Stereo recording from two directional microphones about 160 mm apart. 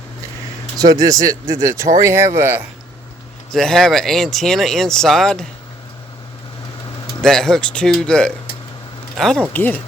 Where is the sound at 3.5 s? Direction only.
5° left (ahead or behind).